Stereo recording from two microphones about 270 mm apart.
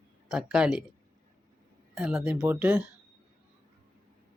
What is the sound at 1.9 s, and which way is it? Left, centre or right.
Speech, centre.